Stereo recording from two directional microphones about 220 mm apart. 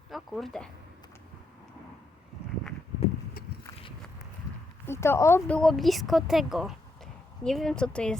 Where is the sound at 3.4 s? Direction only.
40° left (ahead or behind).